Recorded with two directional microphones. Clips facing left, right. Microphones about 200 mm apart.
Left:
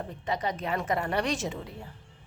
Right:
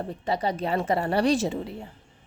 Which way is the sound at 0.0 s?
35° right (ahead or behind).